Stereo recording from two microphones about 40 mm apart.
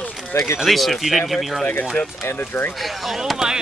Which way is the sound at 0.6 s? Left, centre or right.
Centre.